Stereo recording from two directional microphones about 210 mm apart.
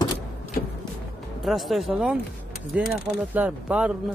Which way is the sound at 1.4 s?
Centre (ahead or behind).